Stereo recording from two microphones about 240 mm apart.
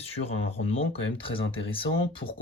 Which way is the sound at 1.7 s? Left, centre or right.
Left.